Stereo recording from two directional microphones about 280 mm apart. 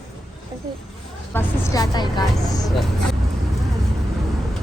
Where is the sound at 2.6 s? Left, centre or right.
Centre.